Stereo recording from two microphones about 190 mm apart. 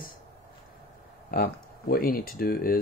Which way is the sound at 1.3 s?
50° left (ahead or behind).